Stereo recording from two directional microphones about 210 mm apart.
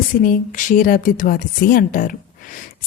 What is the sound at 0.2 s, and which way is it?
A woman's voice, 40° left (ahead or behind).